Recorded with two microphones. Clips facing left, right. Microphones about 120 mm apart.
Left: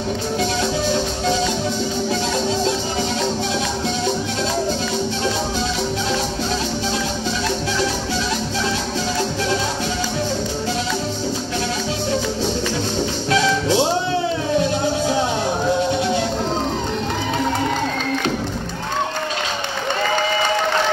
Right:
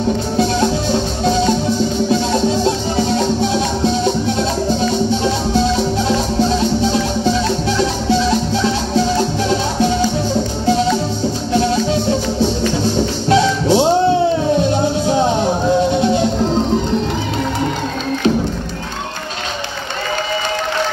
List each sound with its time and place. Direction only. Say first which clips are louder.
13.3 s music: right 5 dB; 30° right (ahead or behind)